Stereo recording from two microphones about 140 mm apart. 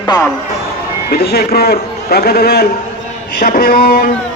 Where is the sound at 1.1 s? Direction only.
90° left.